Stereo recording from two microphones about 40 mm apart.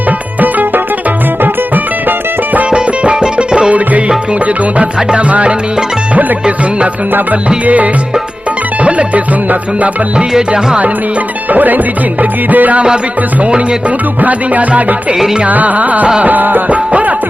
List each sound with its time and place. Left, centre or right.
0.3 s music: right
2.6 s music: right
5.3 s music: right
8.8 s music: right
10.3 s music: centre
11.5 s music: right
14.2 s music: right
16.7 s music: right